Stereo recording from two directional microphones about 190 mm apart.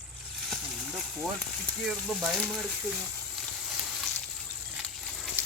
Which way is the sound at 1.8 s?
Centre (ahead or behind).